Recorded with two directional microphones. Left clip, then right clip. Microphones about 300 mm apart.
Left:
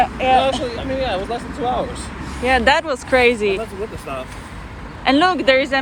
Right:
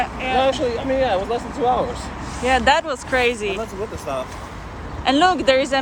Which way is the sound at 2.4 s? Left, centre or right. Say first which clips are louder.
Left 1 dB; centre.